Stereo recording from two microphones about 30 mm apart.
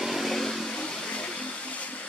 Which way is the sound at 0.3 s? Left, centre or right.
Centre.